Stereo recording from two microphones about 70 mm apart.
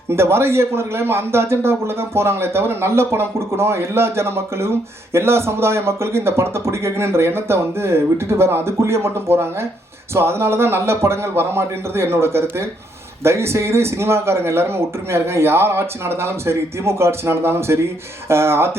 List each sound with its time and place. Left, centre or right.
0.1 s a man's voice: right